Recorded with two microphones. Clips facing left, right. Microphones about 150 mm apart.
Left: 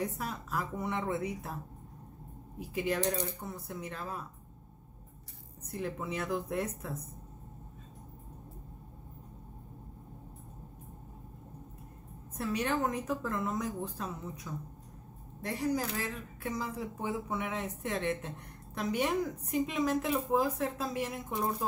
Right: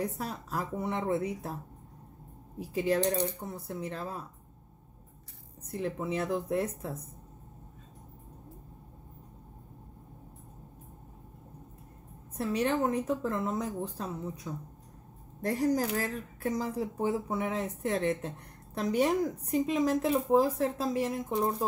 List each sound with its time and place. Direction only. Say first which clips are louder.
0.2 s speech: right 1 dB; 30° right (ahead or behind)
2.6 s speech: right 4 dB; 30° right (ahead or behind)
5.7 s speech: right 4 dB; 25° right (ahead or behind)
12.4 s speech: right 3 dB; 30° right (ahead or behind)
15.4 s speech: right 5 dB; 45° right (ahead or behind)